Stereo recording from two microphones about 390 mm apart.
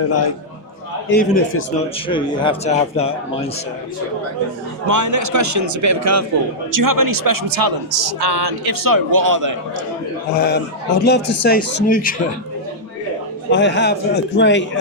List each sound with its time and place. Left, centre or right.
0.1 s a man's voice: left
1.0 s a man's voice: left
2.0 s speech: centre
4.9 s a man's voice: right
6.7 s a man's voice: right
10.3 s a man's voice: left
13.5 s a man's voice: left